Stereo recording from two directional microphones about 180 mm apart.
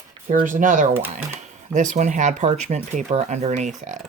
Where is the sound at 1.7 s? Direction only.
40° right (ahead or behind).